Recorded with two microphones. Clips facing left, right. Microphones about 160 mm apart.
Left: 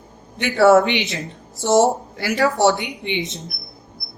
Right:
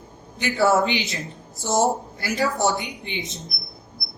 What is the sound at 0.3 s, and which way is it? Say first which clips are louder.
A man's voice: left 6 dB; 65° left (ahead or behind).